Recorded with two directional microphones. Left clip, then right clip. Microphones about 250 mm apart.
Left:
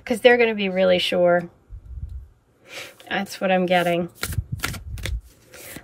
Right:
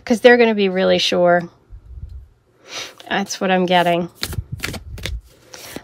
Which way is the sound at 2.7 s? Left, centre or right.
Centre.